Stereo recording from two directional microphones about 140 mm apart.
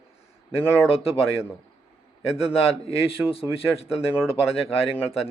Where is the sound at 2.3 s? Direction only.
45° left (ahead or behind).